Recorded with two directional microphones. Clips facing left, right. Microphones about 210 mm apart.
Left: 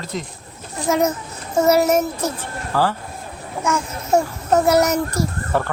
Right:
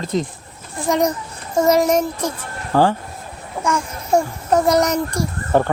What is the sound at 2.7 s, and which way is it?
Speech, 20° right (ahead or behind).